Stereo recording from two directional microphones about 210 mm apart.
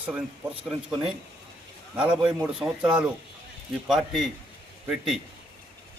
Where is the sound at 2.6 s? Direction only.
15° right (ahead or behind).